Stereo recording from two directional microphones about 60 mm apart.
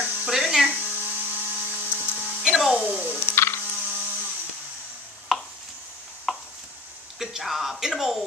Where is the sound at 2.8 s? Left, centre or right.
Right.